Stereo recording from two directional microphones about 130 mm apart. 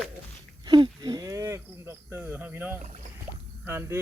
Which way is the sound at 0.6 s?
35° right (ahead or behind).